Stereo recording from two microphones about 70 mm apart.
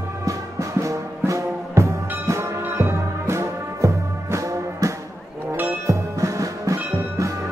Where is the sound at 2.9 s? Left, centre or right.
Right.